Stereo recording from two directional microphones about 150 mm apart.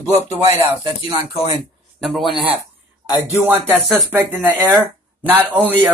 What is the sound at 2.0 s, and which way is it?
Speech, centre (ahead or behind).